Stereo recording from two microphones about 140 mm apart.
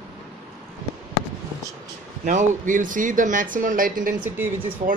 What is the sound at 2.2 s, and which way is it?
Speech, 65° right (ahead or behind).